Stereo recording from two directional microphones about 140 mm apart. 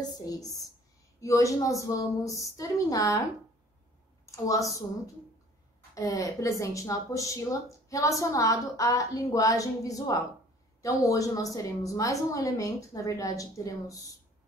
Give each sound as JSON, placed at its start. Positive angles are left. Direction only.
{"t": 0.2, "sound": "a woman's voice", "side_deg": 25}
{"t": 4.3, "sound": "a woman's voice", "side_deg": 25}